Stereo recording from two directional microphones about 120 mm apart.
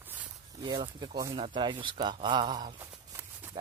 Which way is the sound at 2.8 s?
20° right (ahead or behind).